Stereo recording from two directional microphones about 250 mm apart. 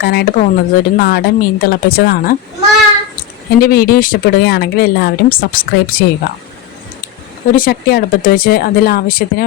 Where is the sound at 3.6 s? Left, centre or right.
Left.